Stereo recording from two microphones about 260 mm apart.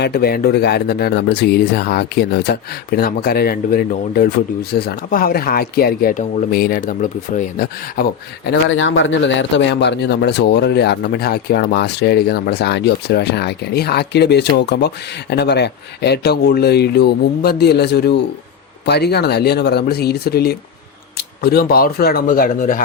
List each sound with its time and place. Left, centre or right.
0.0 s speech: left
8.4 s speech: left